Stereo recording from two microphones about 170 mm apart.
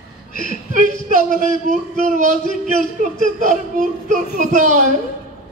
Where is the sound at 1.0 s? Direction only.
50° right (ahead or behind).